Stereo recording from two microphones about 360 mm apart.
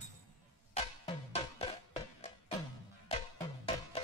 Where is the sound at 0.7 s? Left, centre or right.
Centre.